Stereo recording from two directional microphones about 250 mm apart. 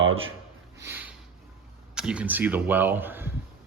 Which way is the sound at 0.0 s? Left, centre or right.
Right.